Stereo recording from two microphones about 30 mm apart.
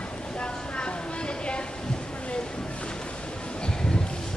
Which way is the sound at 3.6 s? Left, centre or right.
Left.